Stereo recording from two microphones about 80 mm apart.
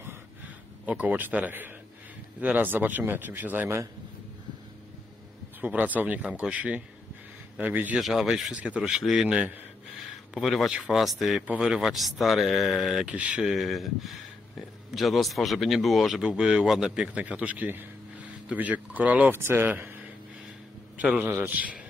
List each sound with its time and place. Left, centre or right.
0.8 s speech: centre
5.6 s speech: centre
7.9 s speech: centre
9.9 s speech: centre
11.4 s speech: centre
13.0 s speech: centre
13.5 s a man's voice: centre
19.3 s speech: right
21.0 s speech: right